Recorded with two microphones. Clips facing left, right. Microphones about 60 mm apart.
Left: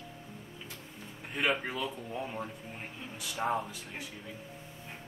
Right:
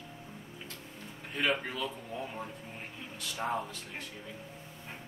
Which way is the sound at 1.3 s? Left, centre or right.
Centre.